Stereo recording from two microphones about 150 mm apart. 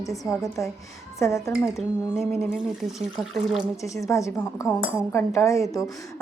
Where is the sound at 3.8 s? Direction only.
20° left (ahead or behind).